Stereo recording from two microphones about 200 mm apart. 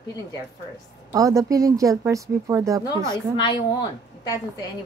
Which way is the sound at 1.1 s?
15° right (ahead or behind).